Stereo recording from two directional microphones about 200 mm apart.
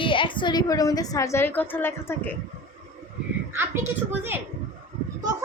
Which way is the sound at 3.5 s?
10° right (ahead or behind).